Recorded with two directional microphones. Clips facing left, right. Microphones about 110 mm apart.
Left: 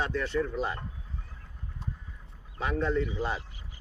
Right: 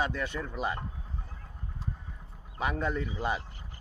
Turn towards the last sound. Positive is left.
turn(degrees=-15)  # may be behind; listen again after turning